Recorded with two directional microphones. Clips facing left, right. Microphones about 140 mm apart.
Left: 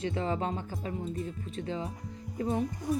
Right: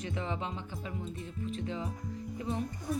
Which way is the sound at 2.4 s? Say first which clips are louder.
Left 6 dB; 40° left (ahead or behind).